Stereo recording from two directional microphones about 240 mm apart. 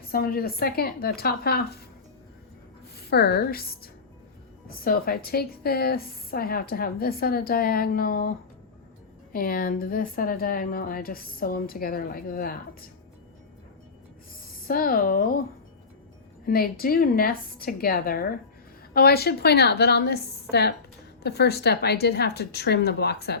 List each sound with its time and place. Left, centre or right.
0.1 s a woman's voice: left
3.1 s a woman's voice: left
9.3 s a woman's voice: left
14.7 s a woman's voice: left
16.5 s a woman's voice: left